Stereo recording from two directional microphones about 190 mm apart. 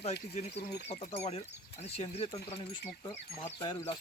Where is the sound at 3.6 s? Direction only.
25° left (ahead or behind).